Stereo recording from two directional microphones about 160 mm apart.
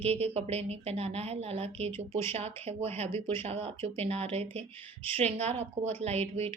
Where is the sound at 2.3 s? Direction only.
40° right (ahead or behind).